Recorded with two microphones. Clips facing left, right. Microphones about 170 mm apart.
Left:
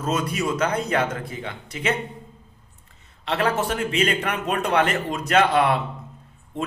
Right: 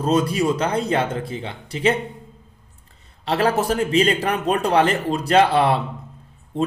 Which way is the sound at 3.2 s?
35° right (ahead or behind).